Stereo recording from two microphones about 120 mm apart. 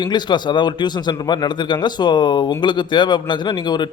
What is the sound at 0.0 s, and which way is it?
A man's voice, 35° left (ahead or behind).